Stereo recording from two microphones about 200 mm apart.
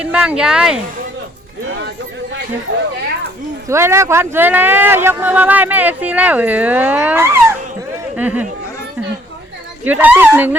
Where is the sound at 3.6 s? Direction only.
15° right (ahead or behind).